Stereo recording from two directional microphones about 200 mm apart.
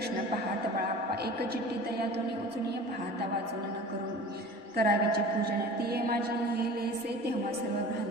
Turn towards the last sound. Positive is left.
turn(degrees=-50)  # may be behind; listen again after turning